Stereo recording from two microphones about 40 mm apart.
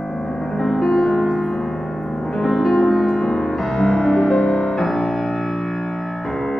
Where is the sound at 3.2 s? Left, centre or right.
Centre.